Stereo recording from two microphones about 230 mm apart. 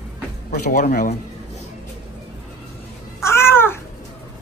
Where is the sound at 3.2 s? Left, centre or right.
Centre.